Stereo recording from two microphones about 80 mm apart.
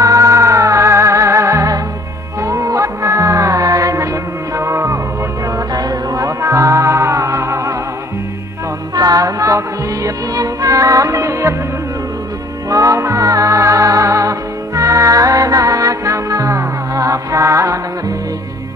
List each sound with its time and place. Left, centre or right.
0.0 s music: right
5.8 s music: right
8.9 s music: right
12.6 s music: right